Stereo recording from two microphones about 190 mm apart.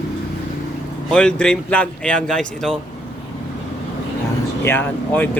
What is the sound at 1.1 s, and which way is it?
Speech, 5° left (ahead or behind).